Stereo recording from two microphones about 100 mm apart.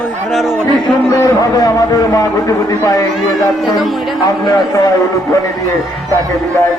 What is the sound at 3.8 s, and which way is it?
Speech, centre (ahead or behind).